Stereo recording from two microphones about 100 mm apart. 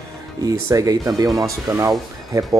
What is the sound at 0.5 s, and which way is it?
Speech, 35° right (ahead or behind).